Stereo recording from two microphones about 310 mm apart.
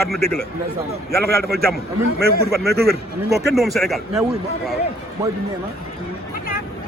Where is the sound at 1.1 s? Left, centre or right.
Right.